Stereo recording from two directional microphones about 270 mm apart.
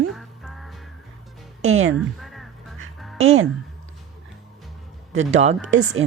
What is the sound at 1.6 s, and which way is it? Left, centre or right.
Speech, right.